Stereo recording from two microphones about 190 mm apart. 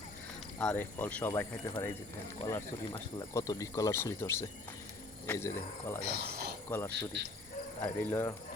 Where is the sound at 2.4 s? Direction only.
20° left (ahead or behind).